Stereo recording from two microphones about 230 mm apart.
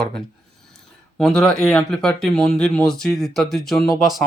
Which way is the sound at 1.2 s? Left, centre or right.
Centre.